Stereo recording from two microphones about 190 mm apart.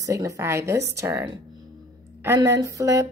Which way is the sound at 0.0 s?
15° right (ahead or behind).